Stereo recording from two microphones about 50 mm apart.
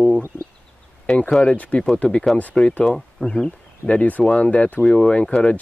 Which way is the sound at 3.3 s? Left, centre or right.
Centre.